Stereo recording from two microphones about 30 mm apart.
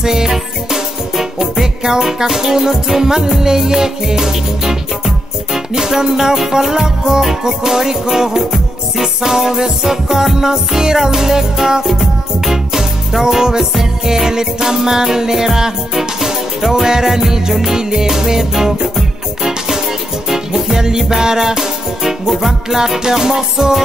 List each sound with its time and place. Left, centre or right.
0.0 s music: centre
22.8 s music: centre